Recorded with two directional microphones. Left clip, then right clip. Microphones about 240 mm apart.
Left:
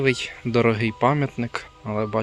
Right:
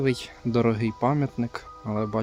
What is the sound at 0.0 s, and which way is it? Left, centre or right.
Speech, centre.